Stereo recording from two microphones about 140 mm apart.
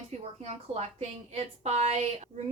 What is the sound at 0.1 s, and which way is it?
A woman's voice, 50° right (ahead or behind).